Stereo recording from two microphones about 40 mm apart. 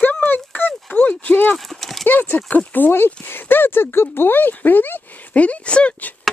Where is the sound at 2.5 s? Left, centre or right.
Left.